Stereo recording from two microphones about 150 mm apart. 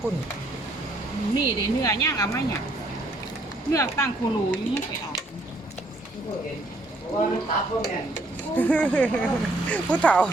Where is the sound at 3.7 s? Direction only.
20° left (ahead or behind).